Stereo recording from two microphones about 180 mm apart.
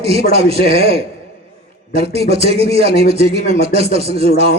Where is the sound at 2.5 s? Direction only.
35° right (ahead or behind).